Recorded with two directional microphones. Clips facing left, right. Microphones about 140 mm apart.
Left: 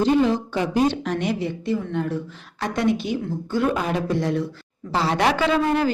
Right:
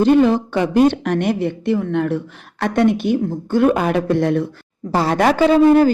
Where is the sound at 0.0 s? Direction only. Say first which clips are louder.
Right 6 dB; 60° right (ahead or behind).